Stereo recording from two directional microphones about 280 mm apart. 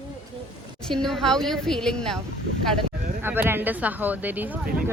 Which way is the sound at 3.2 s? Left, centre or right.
Centre.